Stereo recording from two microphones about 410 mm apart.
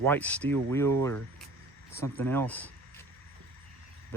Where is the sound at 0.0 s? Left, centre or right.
Centre.